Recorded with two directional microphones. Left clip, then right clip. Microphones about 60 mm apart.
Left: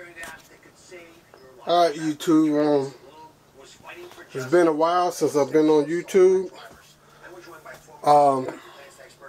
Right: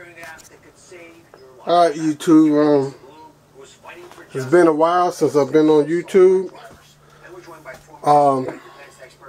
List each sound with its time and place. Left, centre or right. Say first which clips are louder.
1.6 s a man's voice: right 5 dB; centre
3.8 s speech: right 2 dB; centre
8.0 s speech: right 3 dB; centre